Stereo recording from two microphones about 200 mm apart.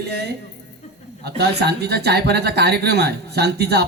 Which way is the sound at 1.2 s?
55° right (ahead or behind).